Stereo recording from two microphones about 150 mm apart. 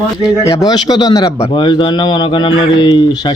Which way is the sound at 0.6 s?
30° left (ahead or behind).